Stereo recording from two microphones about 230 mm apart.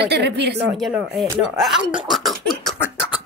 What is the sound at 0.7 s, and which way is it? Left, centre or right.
Speech, centre.